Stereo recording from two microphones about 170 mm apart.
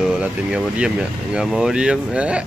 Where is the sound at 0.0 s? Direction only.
5° right (ahead or behind).